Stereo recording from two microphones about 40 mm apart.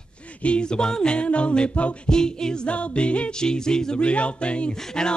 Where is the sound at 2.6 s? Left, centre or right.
Left.